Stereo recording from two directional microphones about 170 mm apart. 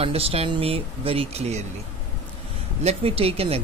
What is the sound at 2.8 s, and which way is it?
Speech, 35° right (ahead or behind).